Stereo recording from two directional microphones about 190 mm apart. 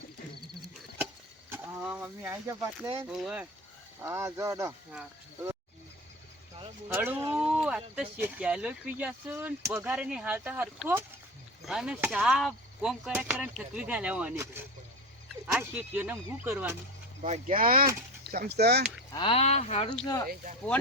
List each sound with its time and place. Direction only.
1.5 s speech: 10° right (ahead or behind)
3.1 s speech: 5° right (ahead or behind)
6.8 s speech: 10° right (ahead or behind)
17.2 s speech: 40° right (ahead or behind); by 18.8 s 60° right (ahead or behind)
19.1 s speech: 30° left (ahead or behind)